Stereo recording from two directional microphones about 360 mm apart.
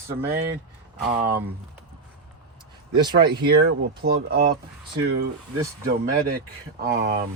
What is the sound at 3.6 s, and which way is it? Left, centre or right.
Speech, right.